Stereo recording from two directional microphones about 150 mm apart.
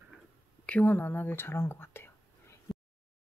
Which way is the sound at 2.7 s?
Centre (ahead or behind).